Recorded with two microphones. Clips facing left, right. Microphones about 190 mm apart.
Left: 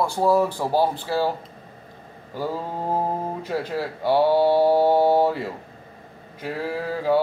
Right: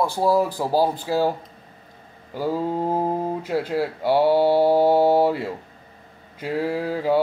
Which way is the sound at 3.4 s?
15° right (ahead or behind).